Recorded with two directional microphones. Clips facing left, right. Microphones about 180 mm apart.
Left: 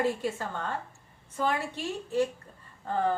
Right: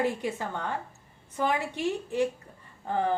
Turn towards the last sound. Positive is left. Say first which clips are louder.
# even
turn(degrees=-15)  # may be behind; listen again after turning